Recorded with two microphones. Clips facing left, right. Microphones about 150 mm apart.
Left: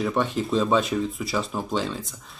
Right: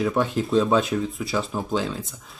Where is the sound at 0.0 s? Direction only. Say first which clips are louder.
Right 2 dB; centre (ahead or behind).